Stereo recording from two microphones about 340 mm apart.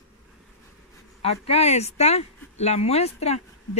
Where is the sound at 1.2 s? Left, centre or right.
Centre.